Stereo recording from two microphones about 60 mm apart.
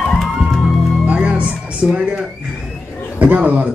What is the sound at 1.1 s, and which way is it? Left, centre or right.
Music, centre.